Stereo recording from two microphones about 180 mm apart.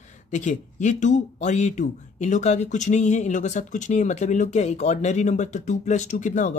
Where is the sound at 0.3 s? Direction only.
45° left (ahead or behind).